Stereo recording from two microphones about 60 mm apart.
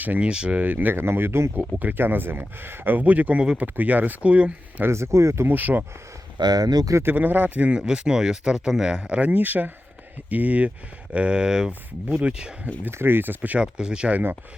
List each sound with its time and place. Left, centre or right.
0.0 s speech: right
4.9 s speech: right
5.5 s speech: right
6.5 s speech: right
7.0 s speech: right; by 12.5 s centre
12.9 s speech: right
13.6 s speech: centre